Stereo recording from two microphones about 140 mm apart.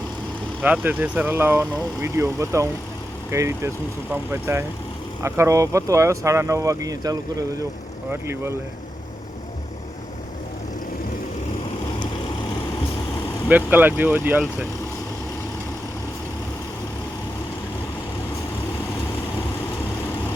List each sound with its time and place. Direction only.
0.6 s speech: 10° right (ahead or behind); by 7.2 s 25° right (ahead or behind)
13.5 s speech: 15° right (ahead or behind)